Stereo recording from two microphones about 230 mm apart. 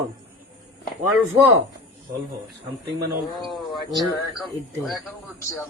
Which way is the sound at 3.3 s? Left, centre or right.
Centre.